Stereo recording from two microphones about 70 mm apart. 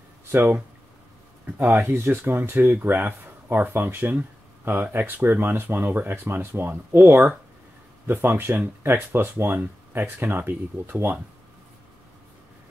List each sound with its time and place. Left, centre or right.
0.3 s speech: right